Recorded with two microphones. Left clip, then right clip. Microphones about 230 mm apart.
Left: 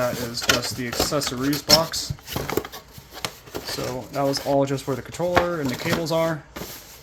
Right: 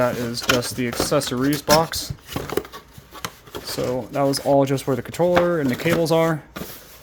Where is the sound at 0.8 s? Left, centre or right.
Right.